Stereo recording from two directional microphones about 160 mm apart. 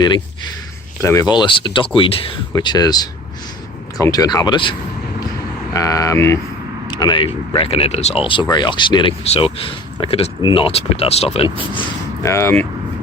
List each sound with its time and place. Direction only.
0.0 s speech: 25° left (ahead or behind)
5.7 s speech: 20° left (ahead or behind)
12.2 s speech: 15° left (ahead or behind)